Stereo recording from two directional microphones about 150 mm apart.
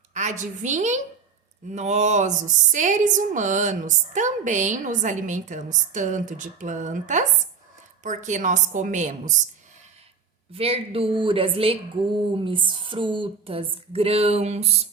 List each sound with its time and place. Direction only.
0.1 s a woman's voice: 50° right (ahead or behind)
10.5 s speech: 40° right (ahead or behind)